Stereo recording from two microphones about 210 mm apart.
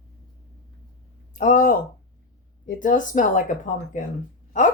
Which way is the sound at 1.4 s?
35° left (ahead or behind).